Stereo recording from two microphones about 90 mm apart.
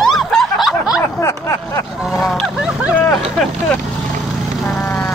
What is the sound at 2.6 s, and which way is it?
Speech, 15° right (ahead or behind).